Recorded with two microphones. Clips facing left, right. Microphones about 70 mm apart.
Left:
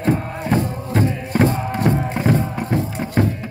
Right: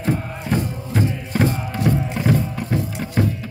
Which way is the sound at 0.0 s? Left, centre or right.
Left.